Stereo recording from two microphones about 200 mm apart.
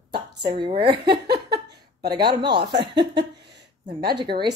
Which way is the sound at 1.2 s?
55° right (ahead or behind).